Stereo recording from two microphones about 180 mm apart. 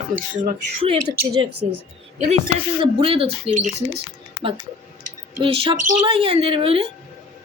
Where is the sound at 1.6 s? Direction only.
35° right (ahead or behind).